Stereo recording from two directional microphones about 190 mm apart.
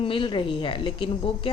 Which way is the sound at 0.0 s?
25° left (ahead or behind).